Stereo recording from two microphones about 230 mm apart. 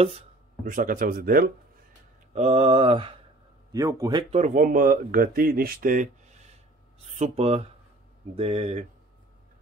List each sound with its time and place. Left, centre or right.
0.7 s speech: right
2.3 s speech: right
7.2 s speech: right